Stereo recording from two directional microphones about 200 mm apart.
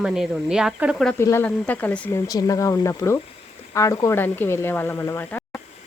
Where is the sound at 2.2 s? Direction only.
15° left (ahead or behind).